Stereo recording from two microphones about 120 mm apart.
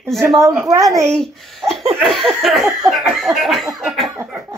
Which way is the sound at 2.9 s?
Centre (ahead or behind).